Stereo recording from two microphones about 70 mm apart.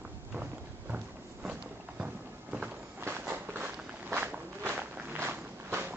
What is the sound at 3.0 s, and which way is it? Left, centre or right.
Walk, right.